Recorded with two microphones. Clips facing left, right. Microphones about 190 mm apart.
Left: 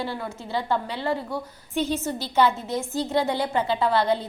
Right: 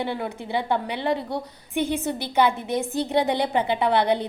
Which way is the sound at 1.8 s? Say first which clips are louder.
Right 1 dB; 55° right (ahead or behind).